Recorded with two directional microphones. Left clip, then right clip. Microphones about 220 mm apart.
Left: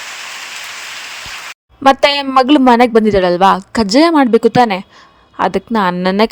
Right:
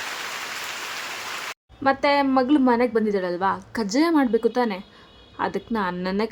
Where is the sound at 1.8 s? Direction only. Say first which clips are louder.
Left 10 dB; 40° left (ahead or behind).